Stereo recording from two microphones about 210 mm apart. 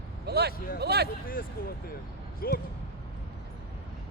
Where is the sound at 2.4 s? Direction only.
45° left (ahead or behind).